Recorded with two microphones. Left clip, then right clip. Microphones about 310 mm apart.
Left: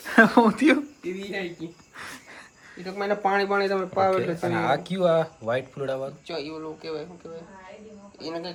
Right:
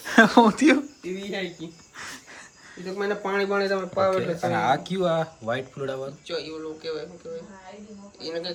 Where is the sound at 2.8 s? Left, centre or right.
Centre.